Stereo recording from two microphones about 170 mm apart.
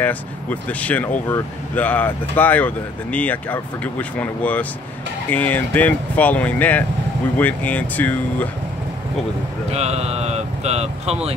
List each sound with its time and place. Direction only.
0.0 s speech: 10° left (ahead or behind)
9.7 s speech: 40° right (ahead or behind)